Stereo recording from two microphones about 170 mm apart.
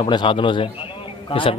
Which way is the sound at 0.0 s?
30° left (ahead or behind).